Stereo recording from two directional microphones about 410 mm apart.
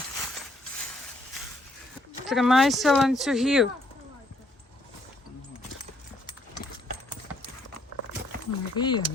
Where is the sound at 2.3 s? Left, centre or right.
Centre.